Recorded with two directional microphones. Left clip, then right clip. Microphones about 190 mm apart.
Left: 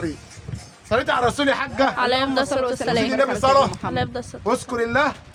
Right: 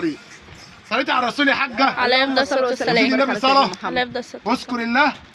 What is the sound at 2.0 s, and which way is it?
A woman's voice, 10° left (ahead or behind).